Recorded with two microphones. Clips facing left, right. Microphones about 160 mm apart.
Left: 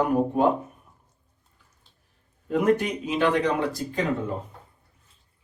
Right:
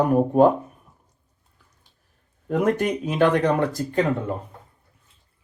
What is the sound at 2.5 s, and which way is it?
Speech, 50° right (ahead or behind).